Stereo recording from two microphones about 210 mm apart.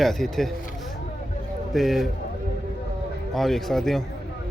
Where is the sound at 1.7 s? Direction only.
Centre (ahead or behind).